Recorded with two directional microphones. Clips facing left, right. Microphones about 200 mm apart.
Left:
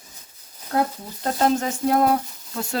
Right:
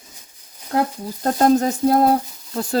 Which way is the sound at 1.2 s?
40° right (ahead or behind).